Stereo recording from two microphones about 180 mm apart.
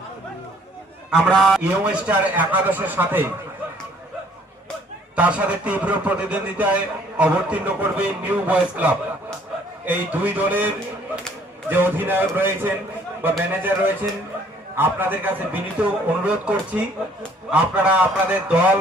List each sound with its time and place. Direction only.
1.1 s a man's voice: centre (ahead or behind)
5.1 s a man's voice: 5° right (ahead or behind)
11.7 s a man's voice: 10° right (ahead or behind)